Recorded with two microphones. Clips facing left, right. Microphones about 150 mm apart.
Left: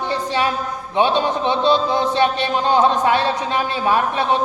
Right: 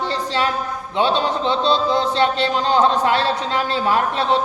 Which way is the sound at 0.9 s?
15° left (ahead or behind).